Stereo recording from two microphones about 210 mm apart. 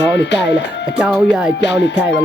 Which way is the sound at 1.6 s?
55° left (ahead or behind).